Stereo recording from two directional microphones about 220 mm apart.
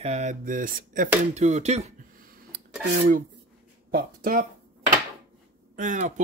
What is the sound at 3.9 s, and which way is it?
Speech, 40° right (ahead or behind).